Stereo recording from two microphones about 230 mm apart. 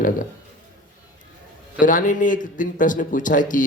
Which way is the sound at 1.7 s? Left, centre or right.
Left.